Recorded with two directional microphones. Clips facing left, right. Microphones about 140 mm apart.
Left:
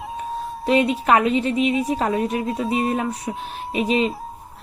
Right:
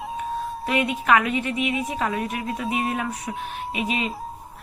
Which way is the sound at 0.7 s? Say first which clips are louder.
Left 4 dB; 30° left (ahead or behind).